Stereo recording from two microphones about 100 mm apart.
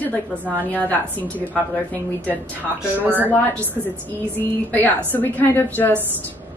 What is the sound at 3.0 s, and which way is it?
Speech, 20° right (ahead or behind).